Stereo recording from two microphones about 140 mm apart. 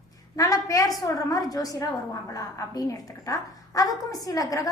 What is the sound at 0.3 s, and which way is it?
A woman's voice, 25° left (ahead or behind).